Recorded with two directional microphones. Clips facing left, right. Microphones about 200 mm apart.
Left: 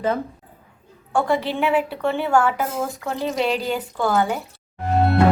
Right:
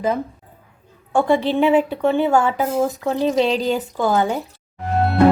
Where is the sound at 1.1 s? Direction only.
20° right (ahead or behind).